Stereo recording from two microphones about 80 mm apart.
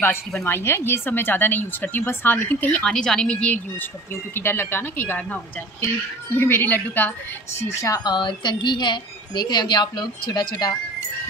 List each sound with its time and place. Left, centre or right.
0.4 s speech: left
2.8 s a woman's voice: centre
4.1 s speech: left
7.5 s a woman's voice: left
8.0 s a woman's voice: left